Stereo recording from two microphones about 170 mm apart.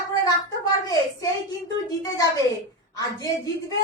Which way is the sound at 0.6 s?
20° left (ahead or behind).